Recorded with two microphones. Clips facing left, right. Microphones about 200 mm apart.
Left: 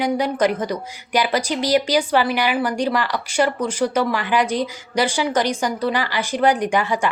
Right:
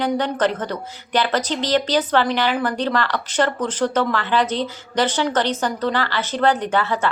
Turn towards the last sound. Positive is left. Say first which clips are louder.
# left 1 dB
turn(degrees=15)  # may be behind; listen again after turning